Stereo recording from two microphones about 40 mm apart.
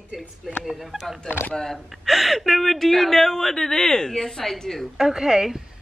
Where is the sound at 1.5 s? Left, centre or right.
Centre.